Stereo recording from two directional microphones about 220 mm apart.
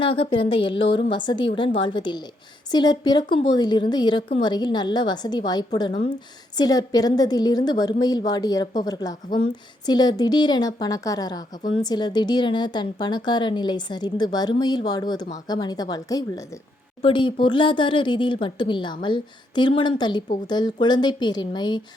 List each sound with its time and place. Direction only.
0.0 s a woman's voice: 25° left (ahead or behind)